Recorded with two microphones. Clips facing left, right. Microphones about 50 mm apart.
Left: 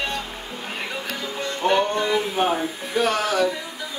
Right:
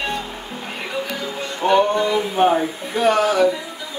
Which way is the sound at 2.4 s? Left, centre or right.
Centre.